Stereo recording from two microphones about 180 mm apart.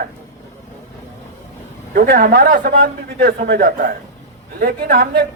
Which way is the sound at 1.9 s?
60° right (ahead or behind).